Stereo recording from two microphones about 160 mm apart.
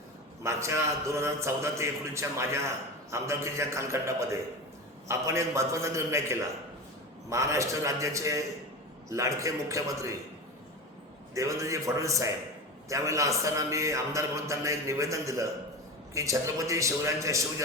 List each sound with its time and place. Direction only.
0.4 s a man's voice: 20° right (ahead or behind)
11.3 s a man's voice: 20° right (ahead or behind)